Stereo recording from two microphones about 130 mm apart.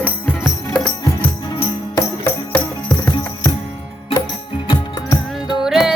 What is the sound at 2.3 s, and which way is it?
Music, 15° left (ahead or behind).